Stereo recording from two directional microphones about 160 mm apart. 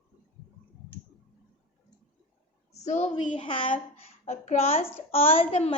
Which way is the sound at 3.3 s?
35° left (ahead or behind).